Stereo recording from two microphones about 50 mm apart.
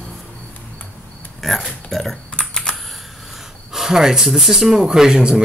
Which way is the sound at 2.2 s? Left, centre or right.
Left.